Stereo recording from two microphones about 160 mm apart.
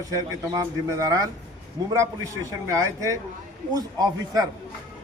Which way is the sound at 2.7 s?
20° right (ahead or behind).